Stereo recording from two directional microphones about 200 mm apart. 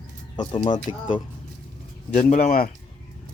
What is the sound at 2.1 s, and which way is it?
Speech, 35° left (ahead or behind).